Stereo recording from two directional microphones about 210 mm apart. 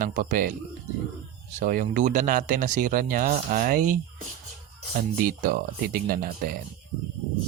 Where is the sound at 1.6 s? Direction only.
40° right (ahead or behind).